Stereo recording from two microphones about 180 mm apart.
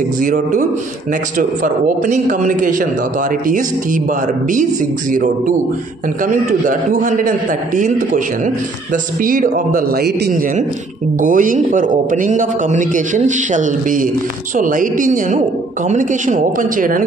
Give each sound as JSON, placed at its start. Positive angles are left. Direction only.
{"t": 0.2, "sound": "a man's voice", "side_deg": -45}
{"t": 5.1, "sound": "a man's voice", "side_deg": -45}
{"t": 9.2, "sound": "a man's voice", "side_deg": -50}
{"t": 11.1, "sound": "a man's voice", "side_deg": -50}